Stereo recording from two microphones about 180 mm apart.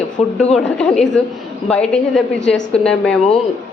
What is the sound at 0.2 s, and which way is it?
Speech, 35° left (ahead or behind).